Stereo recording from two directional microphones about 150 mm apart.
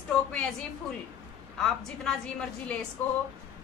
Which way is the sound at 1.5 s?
5° left (ahead or behind).